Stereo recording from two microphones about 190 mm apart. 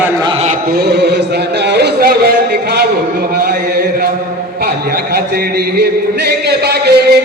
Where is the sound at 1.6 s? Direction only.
60° right (ahead or behind).